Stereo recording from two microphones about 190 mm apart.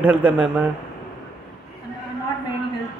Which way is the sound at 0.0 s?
10° right (ahead or behind).